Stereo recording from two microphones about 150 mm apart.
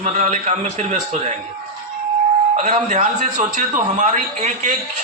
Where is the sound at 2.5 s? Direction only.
50° right (ahead or behind).